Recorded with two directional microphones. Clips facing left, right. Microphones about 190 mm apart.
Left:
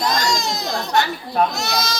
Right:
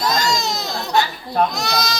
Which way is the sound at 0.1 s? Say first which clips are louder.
Right 1 dB; 20° right (ahead or behind).